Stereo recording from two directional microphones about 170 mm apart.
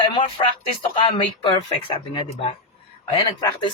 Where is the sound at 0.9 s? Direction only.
30° left (ahead or behind).